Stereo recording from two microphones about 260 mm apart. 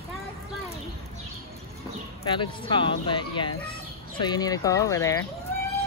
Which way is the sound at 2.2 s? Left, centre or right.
Centre.